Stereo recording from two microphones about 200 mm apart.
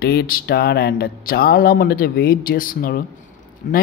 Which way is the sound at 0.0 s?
50° left (ahead or behind).